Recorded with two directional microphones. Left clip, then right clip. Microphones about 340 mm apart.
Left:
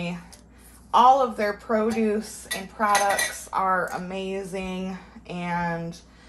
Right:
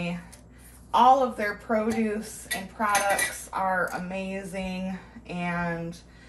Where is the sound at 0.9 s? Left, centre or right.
Centre.